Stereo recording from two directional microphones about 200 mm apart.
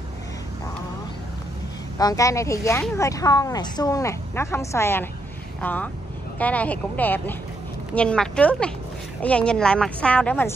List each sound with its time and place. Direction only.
2.0 s speech: 15° left (ahead or behind)